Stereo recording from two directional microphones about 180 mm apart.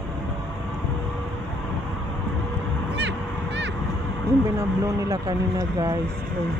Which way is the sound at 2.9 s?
75° right (ahead or behind).